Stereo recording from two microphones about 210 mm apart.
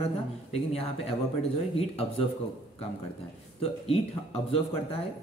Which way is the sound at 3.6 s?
30° left (ahead or behind).